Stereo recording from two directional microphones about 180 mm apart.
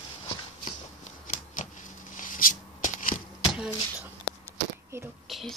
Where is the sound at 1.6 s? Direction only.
45° left (ahead or behind).